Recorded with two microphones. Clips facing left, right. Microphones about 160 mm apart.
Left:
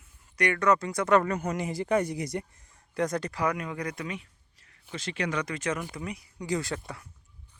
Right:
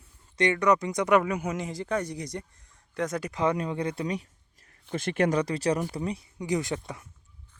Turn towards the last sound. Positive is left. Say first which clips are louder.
# right 2 dB
turn(degrees=-20)  # may be behind; listen again after turning